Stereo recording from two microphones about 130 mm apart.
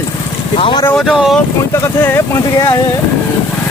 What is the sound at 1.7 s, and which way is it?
Speech, 20° left (ahead or behind).